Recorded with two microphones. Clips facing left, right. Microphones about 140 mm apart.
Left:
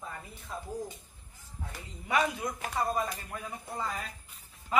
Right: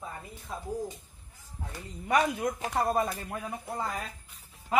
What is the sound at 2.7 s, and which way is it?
Speech, 65° right (ahead or behind).